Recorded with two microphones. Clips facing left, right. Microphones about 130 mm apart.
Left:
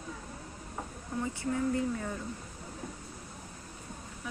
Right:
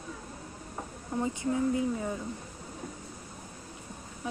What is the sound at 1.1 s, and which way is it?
Speech, 20° right (ahead or behind).